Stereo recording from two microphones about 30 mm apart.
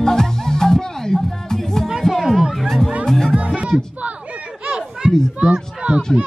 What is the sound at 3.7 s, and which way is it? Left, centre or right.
Speech, right.